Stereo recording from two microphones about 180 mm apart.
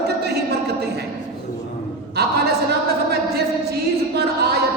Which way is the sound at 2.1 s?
65° right (ahead or behind).